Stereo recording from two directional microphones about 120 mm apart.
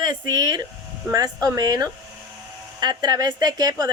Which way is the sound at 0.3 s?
30° right (ahead or behind).